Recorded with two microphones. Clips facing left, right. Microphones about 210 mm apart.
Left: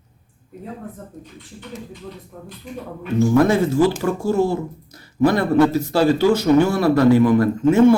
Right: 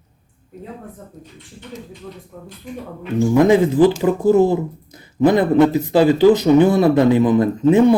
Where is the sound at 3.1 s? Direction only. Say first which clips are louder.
Right 2 dB; 15° right (ahead or behind).